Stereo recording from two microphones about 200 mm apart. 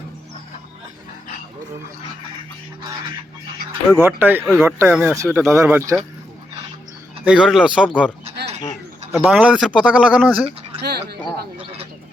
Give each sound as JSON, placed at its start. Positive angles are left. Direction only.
{"t": 3.9, "sound": "speech", "side_deg": -10}
{"t": 7.3, "sound": "speech", "side_deg": -5}
{"t": 9.1, "sound": "speech", "side_deg": -5}
{"t": 10.8, "sound": "a sound", "side_deg": -55}